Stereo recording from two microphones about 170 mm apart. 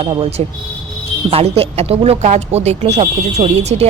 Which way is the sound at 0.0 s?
30° right (ahead or behind).